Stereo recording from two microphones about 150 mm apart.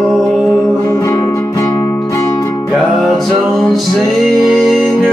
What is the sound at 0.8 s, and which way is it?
Music, 20° left (ahead or behind).